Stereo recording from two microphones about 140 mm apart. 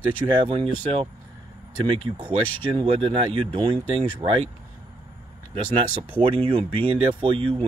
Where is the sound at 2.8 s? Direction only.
40° right (ahead or behind).